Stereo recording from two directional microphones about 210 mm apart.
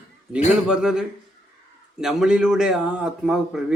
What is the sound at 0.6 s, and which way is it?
A man's voice, 5° right (ahead or behind).